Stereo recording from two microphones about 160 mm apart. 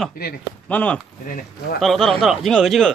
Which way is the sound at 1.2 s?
60° left (ahead or behind).